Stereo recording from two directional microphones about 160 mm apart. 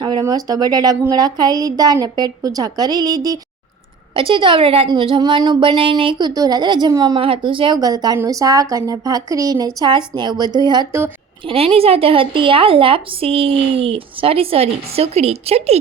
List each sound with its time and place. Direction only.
0.0 s a woman's voice: 25° right (ahead or behind)
11.4 s a woman's voice: 40° right (ahead or behind)